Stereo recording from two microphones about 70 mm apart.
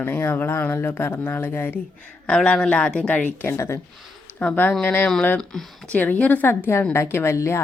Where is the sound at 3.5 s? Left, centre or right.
Left.